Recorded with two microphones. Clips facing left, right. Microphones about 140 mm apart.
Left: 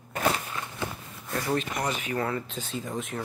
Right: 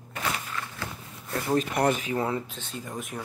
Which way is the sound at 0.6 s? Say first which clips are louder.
Even; 20° left (ahead or behind).